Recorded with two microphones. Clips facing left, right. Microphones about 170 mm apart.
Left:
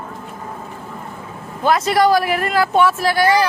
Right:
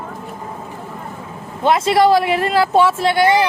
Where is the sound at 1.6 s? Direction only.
25° right (ahead or behind).